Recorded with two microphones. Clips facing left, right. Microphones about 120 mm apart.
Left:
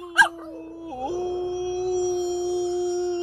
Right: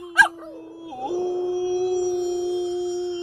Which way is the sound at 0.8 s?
5° right (ahead or behind).